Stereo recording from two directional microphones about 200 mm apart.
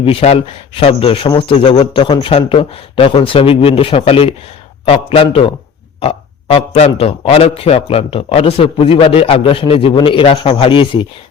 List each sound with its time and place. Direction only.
0.0 s a man's voice: 30° left (ahead or behind)